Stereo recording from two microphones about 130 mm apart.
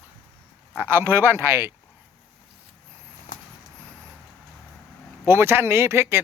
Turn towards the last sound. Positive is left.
turn(degrees=-20)  # may be behind; listen again after turning